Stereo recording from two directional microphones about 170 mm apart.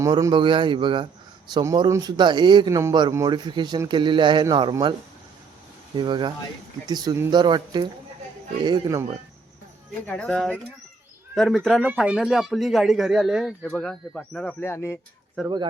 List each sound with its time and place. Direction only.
0.0 s a man's voice: 20° right (ahead or behind)
6.0 s a man's voice: 25° right (ahead or behind)
10.1 s speech: 5° left (ahead or behind)
15.4 s speech: centre (ahead or behind)